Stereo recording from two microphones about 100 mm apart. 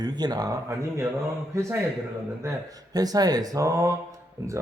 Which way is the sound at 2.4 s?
40° right (ahead or behind).